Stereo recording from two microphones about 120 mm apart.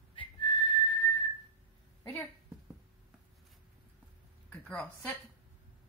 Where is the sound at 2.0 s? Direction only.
15° left (ahead or behind).